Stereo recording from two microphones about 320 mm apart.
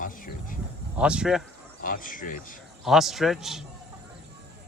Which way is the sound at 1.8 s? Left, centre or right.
Left.